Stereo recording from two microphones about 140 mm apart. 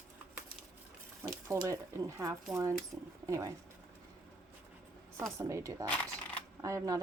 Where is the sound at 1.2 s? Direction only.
20° right (ahead or behind).